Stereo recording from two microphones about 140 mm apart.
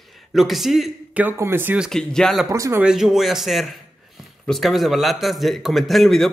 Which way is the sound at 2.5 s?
20° right (ahead or behind).